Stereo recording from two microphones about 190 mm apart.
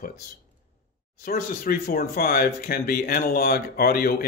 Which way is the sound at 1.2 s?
50° left (ahead or behind).